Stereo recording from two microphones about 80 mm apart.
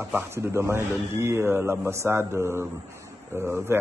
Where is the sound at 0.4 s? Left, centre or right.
Right.